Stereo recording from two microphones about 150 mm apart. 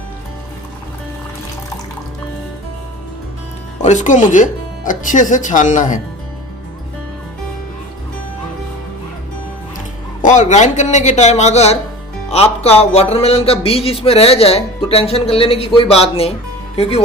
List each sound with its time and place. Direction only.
3.8 s speech: 55° left (ahead or behind)
10.2 s speech: 55° left (ahead or behind)